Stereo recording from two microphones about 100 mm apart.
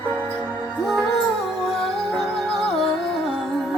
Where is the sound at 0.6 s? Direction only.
Centre (ahead or behind).